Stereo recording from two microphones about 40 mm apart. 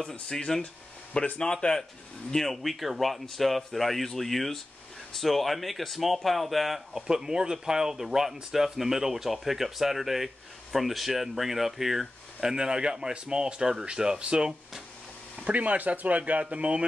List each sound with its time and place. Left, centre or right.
0.0 s speech: left
2.3 s speech: centre
12.4 s speech: centre
15.4 s speech: right